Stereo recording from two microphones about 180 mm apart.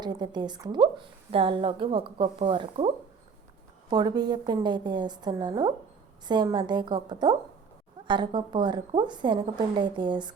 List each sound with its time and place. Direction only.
0.0 s a woman's voice: 25° right (ahead or behind)